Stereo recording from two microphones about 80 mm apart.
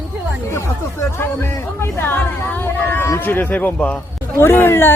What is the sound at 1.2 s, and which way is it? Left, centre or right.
Speech, left.